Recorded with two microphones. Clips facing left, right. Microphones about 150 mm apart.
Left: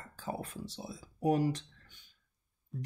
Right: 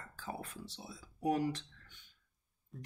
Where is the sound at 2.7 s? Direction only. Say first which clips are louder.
Left 8 dB; centre (ahead or behind).